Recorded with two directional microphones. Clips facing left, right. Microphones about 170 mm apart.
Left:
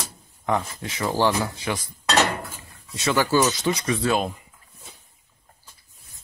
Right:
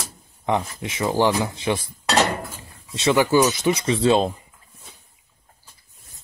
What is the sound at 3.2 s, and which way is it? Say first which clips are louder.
Speech: right 2 dB; 15° right (ahead or behind).